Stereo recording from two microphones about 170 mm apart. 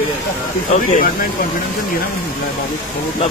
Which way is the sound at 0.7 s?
50° left (ahead or behind).